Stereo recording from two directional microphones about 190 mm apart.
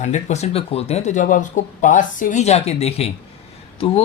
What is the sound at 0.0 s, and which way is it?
A man's voice, 35° left (ahead or behind).